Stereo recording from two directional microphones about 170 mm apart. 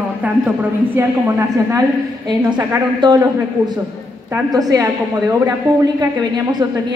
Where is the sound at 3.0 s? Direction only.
25° right (ahead or behind).